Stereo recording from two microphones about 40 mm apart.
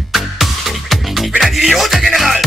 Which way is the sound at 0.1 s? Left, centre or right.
Centre.